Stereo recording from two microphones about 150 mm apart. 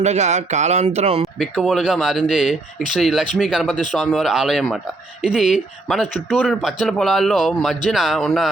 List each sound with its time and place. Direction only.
0.0 s speech: 50° right (ahead or behind)
1.4 s speech: centre (ahead or behind)